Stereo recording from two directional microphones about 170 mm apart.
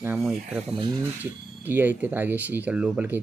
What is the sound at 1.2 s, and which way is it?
Speech, 10° right (ahead or behind).